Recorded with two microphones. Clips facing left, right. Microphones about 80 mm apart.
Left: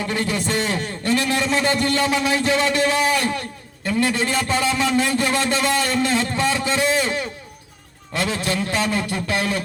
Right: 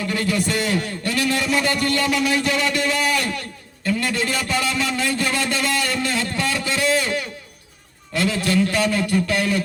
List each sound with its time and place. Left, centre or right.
0.0 s a man's voice: left